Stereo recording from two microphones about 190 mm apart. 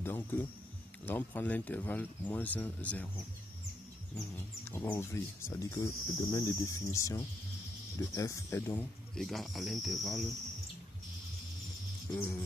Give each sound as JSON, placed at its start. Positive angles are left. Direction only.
{"t": 0.0, "sound": "speech", "side_deg": 10}
{"t": 4.6, "sound": "speech", "side_deg": 15}
{"t": 12.1, "sound": "speech", "side_deg": 10}